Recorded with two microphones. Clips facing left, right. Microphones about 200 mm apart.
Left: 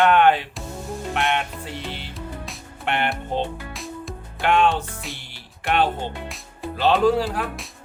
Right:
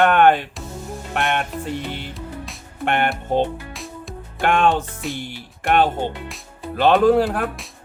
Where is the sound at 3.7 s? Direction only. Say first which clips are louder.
Left 1 dB; centre (ahead or behind).